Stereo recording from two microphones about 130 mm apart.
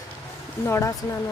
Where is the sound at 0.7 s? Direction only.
20° left (ahead or behind).